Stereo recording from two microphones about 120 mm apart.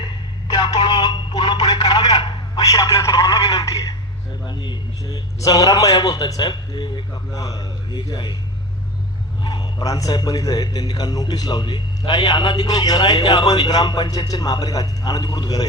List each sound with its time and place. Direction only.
0.4 s a sound: 35° left (ahead or behind)
4.4 s a man's voice: 40° left (ahead or behind)
5.4 s a man's voice: 30° left (ahead or behind)
9.4 s a man's voice: 35° left (ahead or behind)